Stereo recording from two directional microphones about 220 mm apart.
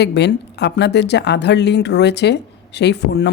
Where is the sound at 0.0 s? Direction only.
50° left (ahead or behind).